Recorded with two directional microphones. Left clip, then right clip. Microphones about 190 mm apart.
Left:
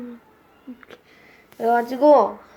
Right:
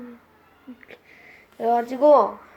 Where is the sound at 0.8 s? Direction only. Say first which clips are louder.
Even; 10° left (ahead or behind).